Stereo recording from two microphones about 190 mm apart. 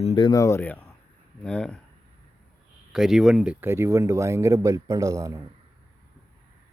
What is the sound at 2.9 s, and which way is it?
Speech, centre (ahead or behind).